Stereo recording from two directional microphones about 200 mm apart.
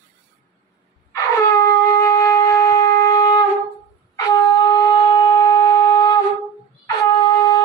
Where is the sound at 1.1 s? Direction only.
15° left (ahead or behind).